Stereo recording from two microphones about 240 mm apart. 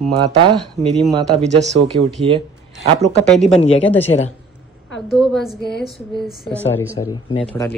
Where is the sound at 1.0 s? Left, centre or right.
Centre.